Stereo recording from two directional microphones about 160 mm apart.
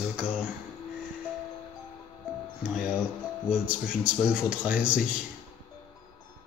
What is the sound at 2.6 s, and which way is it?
Music, 5° right (ahead or behind).